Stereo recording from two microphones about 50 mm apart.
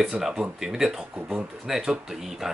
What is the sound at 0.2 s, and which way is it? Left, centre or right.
Speech, centre.